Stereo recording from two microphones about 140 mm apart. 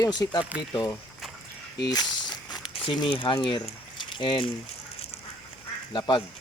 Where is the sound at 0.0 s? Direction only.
30° left (ahead or behind).